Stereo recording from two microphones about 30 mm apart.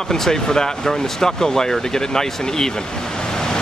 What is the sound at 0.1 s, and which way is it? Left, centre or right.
Speech, centre.